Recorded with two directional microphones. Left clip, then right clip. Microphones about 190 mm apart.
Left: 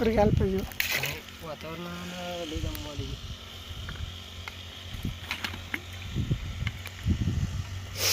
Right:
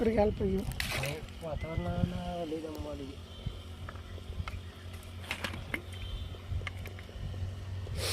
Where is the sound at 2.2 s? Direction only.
30° right (ahead or behind).